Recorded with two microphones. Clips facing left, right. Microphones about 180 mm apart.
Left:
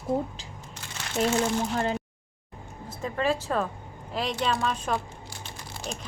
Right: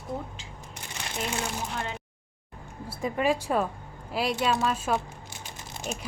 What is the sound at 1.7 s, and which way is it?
Speech, 40° left (ahead or behind).